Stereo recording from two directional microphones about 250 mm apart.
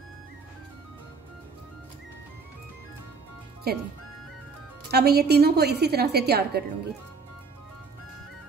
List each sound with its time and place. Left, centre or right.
3.7 s a woman's voice: right
4.9 s a woman's voice: right